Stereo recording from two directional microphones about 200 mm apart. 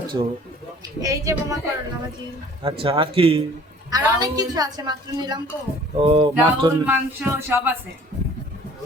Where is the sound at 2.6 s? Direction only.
25° right (ahead or behind).